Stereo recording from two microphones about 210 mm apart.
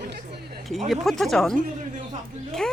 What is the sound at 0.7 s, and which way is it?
Speech, centre (ahead or behind).